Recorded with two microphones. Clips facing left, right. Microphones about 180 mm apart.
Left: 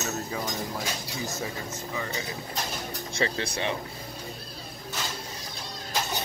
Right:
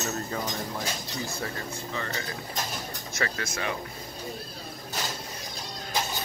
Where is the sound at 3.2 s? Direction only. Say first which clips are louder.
Left 3 dB; 25° left (ahead or behind).